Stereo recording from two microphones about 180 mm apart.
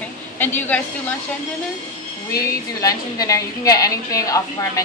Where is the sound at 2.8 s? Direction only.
20° left (ahead or behind).